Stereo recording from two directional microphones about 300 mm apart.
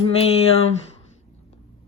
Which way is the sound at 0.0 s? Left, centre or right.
Centre.